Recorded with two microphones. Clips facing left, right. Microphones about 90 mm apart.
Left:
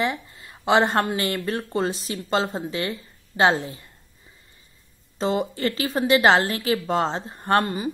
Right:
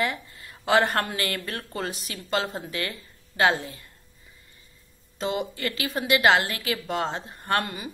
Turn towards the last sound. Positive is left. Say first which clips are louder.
# left 6 dB
turn(degrees=30)  # may be behind; listen again after turning